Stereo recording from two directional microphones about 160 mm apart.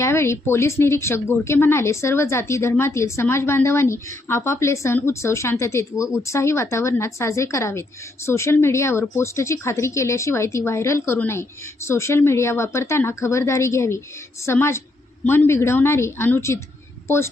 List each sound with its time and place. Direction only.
0.0 s speech: 15° left (ahead or behind)